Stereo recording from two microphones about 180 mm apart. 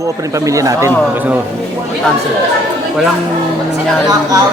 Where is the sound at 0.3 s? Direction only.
15° right (ahead or behind).